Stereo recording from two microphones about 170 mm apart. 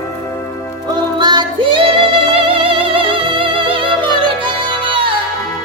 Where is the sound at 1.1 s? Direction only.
25° right (ahead or behind).